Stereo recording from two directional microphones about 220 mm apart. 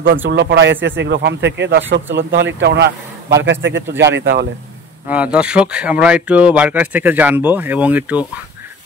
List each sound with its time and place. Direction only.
0.2 s a man's voice: 55° right (ahead or behind)
5.0 s speech: 5° right (ahead or behind)